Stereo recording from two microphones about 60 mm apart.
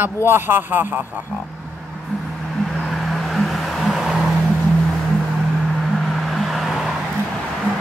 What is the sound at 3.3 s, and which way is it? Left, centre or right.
Vehicle, centre.